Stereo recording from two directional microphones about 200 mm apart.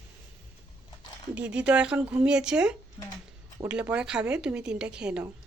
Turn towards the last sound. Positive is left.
turn(degrees=-5)  # may be behind; listen again after turning